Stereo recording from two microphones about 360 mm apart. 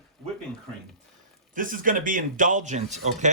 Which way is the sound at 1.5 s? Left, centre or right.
Right.